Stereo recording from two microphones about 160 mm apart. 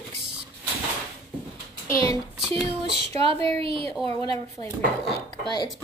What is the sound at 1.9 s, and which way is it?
Speech, 20° left (ahead or behind).